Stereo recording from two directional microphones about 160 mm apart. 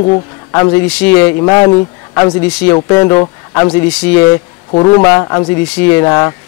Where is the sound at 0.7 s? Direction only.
10° left (ahead or behind).